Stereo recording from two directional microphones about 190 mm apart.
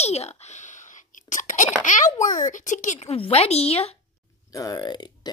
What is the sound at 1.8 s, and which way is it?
A child's voice, 40° left (ahead or behind).